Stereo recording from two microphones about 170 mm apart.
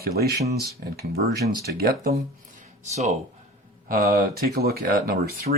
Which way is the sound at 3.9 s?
55° right (ahead or behind).